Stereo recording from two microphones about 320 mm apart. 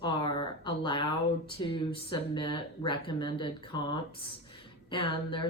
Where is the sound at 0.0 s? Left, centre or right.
Centre.